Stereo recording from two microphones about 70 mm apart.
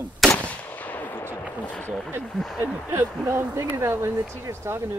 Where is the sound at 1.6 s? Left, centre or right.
Left.